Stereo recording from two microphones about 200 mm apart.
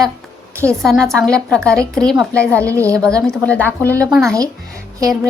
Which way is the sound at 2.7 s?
15° right (ahead or behind).